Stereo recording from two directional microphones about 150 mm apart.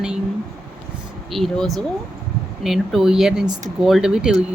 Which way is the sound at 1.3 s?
Centre (ahead or behind).